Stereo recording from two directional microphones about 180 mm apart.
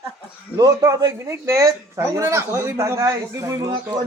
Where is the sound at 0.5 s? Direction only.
20° right (ahead or behind).